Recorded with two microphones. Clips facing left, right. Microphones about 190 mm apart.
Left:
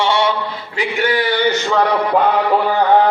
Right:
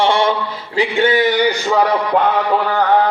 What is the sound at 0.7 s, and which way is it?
A man's voice, 30° right (ahead or behind).